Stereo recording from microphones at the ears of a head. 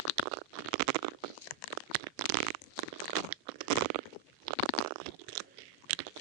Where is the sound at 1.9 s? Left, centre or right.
Right.